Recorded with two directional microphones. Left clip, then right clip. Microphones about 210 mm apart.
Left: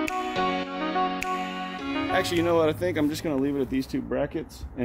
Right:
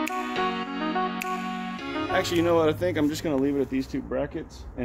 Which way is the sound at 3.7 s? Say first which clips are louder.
Left 1 dB; 50° left (ahead or behind).